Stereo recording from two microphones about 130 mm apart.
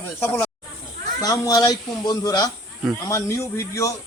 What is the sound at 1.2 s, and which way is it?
Speech, 30° left (ahead or behind).